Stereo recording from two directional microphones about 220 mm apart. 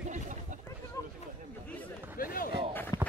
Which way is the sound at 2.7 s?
10° left (ahead or behind).